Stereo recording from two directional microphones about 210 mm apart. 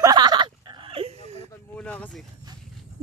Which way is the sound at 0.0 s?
20° right (ahead or behind).